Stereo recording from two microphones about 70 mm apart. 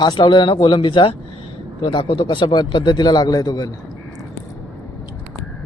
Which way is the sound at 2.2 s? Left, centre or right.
Left.